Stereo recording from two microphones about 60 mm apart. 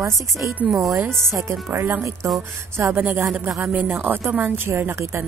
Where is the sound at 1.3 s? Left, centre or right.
Right.